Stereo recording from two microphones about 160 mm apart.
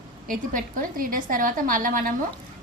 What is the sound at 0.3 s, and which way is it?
A woman's voice, 60° right (ahead or behind).